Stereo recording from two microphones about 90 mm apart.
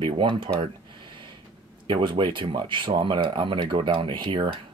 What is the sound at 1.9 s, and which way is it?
Speech, 60° right (ahead or behind).